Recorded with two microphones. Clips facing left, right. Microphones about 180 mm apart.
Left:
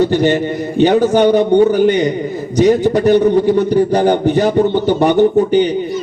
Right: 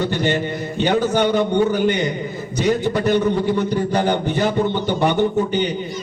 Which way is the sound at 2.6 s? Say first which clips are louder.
Left 8 dB; 15° left (ahead or behind).